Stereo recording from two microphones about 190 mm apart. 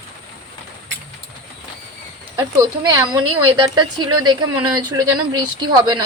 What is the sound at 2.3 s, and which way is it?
A woman's voice, 20° right (ahead or behind).